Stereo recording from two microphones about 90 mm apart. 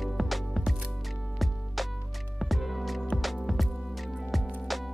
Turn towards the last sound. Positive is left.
turn(degrees=0)  # may be behind; listen again after turning